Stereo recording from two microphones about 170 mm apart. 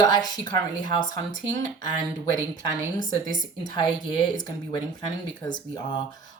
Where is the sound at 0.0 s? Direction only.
25° left (ahead or behind).